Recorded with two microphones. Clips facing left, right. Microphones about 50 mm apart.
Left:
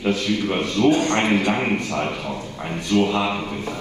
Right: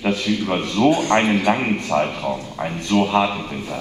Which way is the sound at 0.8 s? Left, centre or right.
Centre.